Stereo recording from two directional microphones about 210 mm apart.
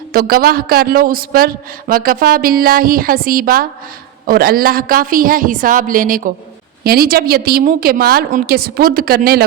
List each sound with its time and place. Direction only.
0.1 s a man's voice: 45° right (ahead or behind)